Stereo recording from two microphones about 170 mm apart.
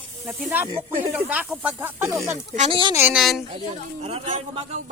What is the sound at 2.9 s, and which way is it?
Speech, 10° right (ahead or behind).